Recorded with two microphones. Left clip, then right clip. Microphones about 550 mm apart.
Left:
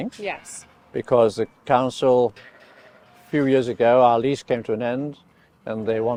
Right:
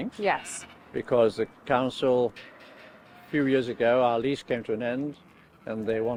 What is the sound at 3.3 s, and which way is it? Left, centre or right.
Speech, left.